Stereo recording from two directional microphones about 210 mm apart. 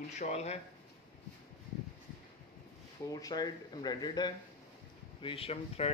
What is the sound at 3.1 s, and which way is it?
A man's voice, 15° left (ahead or behind).